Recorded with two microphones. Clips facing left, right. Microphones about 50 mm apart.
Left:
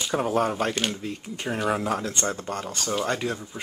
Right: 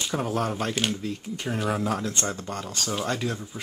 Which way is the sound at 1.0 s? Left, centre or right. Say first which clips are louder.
Even; centre.